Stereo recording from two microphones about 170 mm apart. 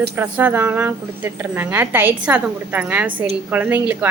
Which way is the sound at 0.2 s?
10° right (ahead or behind).